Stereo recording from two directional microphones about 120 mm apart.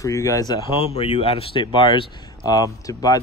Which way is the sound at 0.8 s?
60° left (ahead or behind).